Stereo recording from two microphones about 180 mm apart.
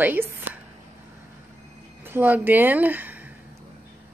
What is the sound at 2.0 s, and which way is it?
Speech, 10° right (ahead or behind).